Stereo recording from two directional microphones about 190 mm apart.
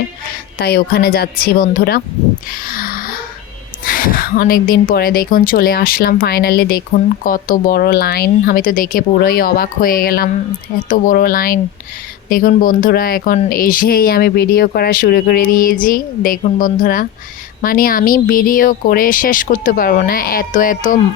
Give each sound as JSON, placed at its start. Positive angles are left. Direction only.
{"t": 0.6, "sound": "speech", "side_deg": 55}
{"t": 2.5, "sound": "a sound", "side_deg": 50}
{"t": 3.8, "sound": "a woman's voice", "side_deg": 45}